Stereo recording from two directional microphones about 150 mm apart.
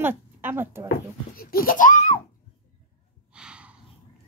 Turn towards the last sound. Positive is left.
turn(degrees=-5)  # may be behind; listen again after turning